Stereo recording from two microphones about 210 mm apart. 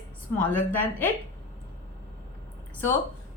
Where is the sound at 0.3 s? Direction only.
10° left (ahead or behind).